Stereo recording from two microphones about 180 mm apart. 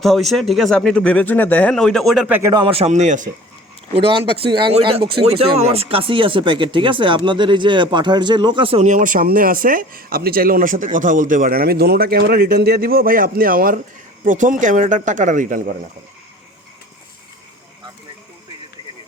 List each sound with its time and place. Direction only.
0.0 s speech: centre (ahead or behind)
2.3 s speech: 20° right (ahead or behind); by 3.2 s 40° right (ahead or behind)
3.9 s speech: 30° right (ahead or behind); by 15.7 s 45° right (ahead or behind)